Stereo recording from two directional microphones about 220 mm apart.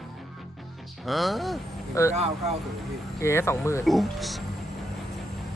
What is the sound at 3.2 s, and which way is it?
Speech, 10° left (ahead or behind).